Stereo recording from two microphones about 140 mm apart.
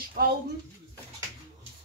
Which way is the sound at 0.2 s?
90° right.